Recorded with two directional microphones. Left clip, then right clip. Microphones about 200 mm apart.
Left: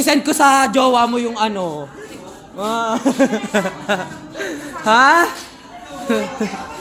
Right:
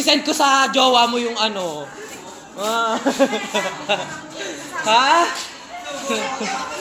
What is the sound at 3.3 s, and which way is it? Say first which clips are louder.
Speech: left 3 dB; 35° left (ahead or behind).